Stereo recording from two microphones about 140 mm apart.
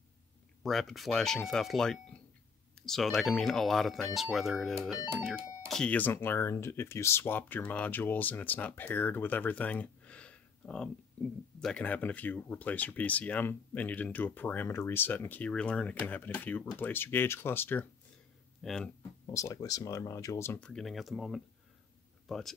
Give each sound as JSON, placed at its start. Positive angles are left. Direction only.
{"t": 0.7, "sound": "speech", "side_deg": 0}
{"t": 18.6, "sound": "speech", "side_deg": 0}
{"t": 19.2, "sound": "speech", "side_deg": 25}
{"t": 20.6, "sound": "speech", "side_deg": 5}